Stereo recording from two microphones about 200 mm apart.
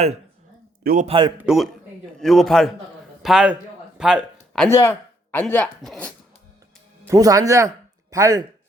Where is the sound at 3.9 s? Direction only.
5° right (ahead or behind).